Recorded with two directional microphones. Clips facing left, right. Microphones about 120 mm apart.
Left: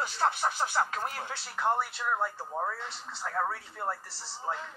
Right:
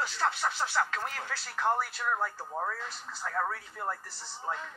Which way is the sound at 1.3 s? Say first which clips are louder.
Even; 25° left (ahead or behind).